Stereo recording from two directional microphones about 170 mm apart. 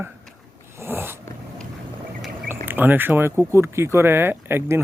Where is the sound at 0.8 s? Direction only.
15° right (ahead or behind).